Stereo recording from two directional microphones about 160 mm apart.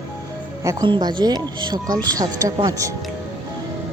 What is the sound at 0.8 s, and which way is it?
Speech, 30° right (ahead or behind).